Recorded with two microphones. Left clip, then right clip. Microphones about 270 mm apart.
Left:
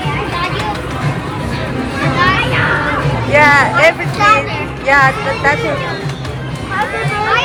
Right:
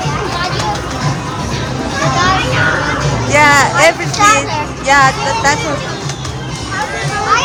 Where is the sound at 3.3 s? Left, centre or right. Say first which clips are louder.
Even; centre.